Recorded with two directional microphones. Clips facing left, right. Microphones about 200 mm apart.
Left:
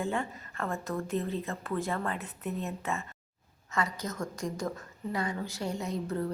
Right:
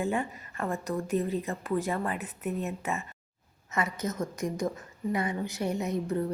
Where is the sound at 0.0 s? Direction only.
15° right (ahead or behind).